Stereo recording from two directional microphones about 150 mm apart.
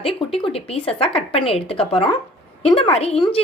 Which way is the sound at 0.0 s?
35° left (ahead or behind).